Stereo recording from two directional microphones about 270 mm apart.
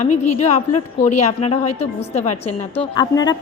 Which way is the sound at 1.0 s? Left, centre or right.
Left.